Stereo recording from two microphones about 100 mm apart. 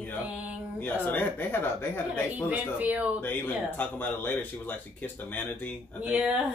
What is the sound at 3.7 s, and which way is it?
Speech, 20° left (ahead or behind).